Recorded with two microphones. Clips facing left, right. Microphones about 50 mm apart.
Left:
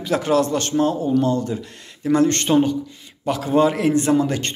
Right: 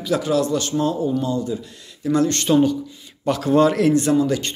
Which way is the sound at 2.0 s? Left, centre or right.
Left.